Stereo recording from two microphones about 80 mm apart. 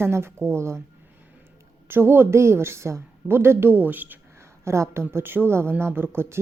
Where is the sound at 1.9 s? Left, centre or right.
Right.